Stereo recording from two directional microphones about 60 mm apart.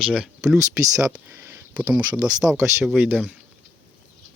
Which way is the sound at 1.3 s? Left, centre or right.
Right.